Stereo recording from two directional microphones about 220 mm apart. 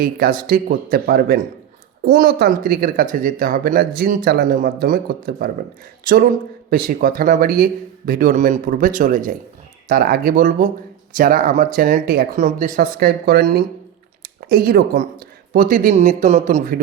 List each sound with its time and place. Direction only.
0.0 s speech: 40° right (ahead or behind)
6.7 s speech: 40° right (ahead or behind)